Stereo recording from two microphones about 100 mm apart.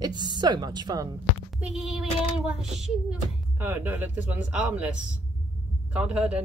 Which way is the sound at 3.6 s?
20° right (ahead or behind).